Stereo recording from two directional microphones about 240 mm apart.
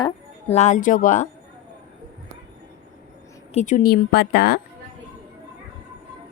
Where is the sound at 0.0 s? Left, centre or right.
Left.